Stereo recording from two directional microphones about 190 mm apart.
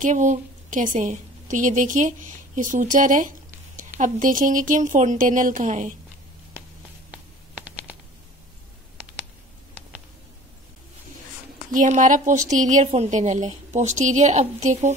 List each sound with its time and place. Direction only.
0.0 s a woman's voice: 40° right (ahead or behind)
7.1 s a sound: 5° right (ahead or behind)
11.7 s a woman's voice: 40° right (ahead or behind)